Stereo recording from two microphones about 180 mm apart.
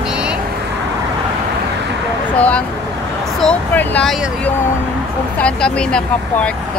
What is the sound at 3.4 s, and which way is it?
Speech, 10° left (ahead or behind).